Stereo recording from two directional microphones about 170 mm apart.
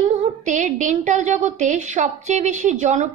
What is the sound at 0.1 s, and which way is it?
A woman's voice, 45° right (ahead or behind).